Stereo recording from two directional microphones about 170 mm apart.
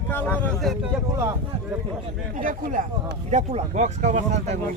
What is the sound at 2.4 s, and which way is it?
Speech, 50° right (ahead or behind).